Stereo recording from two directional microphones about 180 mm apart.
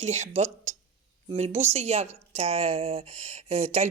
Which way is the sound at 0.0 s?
40° right (ahead or behind).